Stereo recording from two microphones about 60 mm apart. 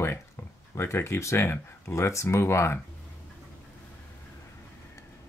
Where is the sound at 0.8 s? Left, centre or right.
Left.